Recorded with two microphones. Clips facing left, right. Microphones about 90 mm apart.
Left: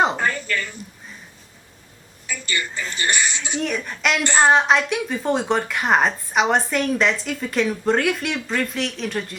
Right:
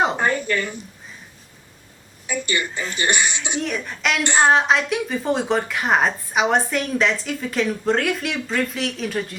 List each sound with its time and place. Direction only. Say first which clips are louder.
0.2 s a sound: right 3 dB; 25° right (ahead or behind)
2.2 s speech: right 3 dB; 20° right (ahead or behind)
3.6 s a woman's voice: left 2 dB; centre (ahead or behind)